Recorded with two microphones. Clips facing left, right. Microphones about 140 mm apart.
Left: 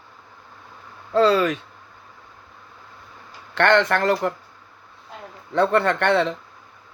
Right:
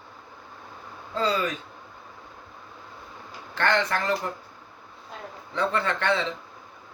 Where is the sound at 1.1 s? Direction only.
70° left (ahead or behind).